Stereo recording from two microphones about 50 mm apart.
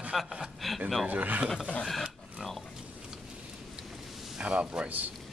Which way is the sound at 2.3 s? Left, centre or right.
Centre.